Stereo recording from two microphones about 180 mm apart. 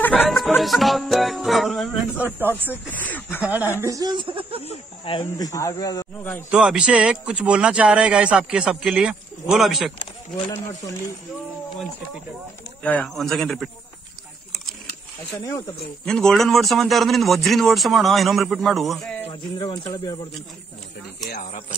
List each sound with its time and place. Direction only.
0.0 s music: 10° left (ahead or behind)
2.9 s speech: 10° left (ahead or behind)
3.4 s speech: 10° right (ahead or behind)
3.8 s speech: 20° right (ahead or behind)
5.2 s speech: 15° left (ahead or behind)
6.5 s a man's voice: 5° right (ahead or behind)
12.8 s a man's voice: 5° left (ahead or behind)
16.1 s a man's voice: 5° left (ahead or behind)
19.2 s speech: 25° left (ahead or behind)
21.3 s speech: 45° left (ahead or behind)